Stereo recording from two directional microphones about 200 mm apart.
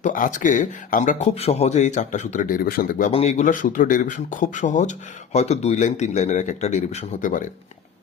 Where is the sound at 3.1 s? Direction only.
35° left (ahead or behind).